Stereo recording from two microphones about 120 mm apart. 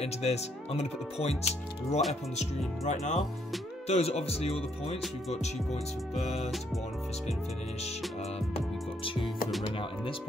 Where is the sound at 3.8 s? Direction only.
60° left (ahead or behind).